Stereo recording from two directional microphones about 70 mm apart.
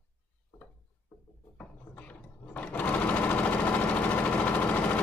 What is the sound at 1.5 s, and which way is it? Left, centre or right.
Sewing machine, left.